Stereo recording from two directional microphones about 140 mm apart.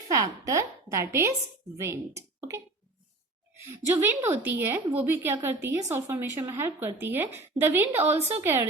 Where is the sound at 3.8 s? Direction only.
20° right (ahead or behind).